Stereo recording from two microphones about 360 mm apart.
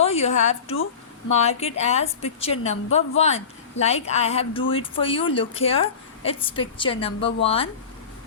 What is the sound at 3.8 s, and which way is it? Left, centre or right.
A woman's voice, centre.